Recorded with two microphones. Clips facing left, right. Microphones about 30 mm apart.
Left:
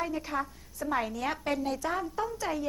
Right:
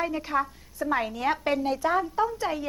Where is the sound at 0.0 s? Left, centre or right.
Right.